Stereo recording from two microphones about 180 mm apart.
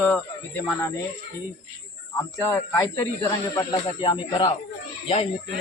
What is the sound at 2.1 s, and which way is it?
Speech, 15° left (ahead or behind).